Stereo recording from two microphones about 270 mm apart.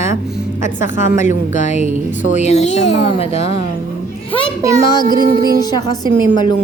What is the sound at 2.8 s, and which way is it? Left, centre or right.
Speech, left.